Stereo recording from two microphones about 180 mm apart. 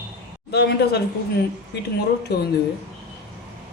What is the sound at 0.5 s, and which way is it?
Speech, 65° left (ahead or behind).